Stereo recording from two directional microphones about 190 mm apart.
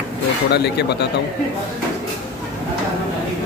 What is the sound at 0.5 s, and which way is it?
Speech, 60° left (ahead or behind).